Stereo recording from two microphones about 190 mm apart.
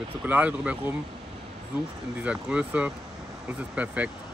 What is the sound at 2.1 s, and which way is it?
Speech, 5° right (ahead or behind).